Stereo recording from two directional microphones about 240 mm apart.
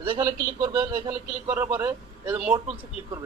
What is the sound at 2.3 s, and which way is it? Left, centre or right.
Speech, right.